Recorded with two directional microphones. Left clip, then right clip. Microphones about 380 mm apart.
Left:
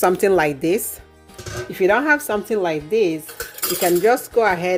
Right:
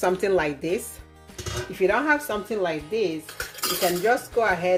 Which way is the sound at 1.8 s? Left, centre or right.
Left.